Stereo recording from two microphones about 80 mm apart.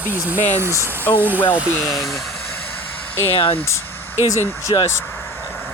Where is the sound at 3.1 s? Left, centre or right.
Left.